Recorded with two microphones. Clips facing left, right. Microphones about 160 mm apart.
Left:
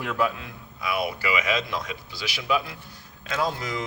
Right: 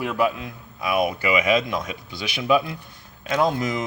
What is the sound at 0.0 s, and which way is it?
Speech, 10° right (ahead or behind).